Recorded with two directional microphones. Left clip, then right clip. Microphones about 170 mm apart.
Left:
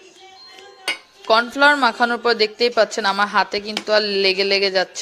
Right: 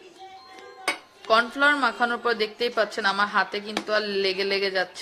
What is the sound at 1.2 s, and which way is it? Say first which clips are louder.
A woman's voice: left 6 dB; 40° left (ahead or behind).